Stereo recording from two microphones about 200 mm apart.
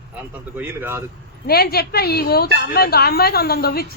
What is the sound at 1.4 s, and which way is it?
A woman's voice, 50° left (ahead or behind).